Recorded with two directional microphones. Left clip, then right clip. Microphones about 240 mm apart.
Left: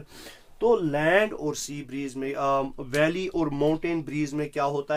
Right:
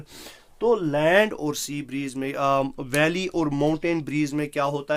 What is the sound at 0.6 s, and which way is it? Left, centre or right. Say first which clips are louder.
Speech: right 1 dB; centre.